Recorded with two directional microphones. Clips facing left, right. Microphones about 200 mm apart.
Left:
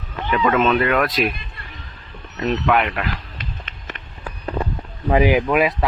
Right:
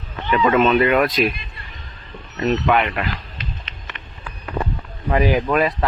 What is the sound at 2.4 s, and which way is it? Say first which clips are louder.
Speech: right 1 dB; centre (ahead or behind).